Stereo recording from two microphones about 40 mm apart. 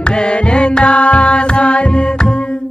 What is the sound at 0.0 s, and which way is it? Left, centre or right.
Music, left.